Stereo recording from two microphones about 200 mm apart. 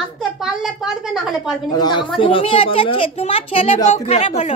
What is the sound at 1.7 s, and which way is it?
A woman's voice, 20° left (ahead or behind).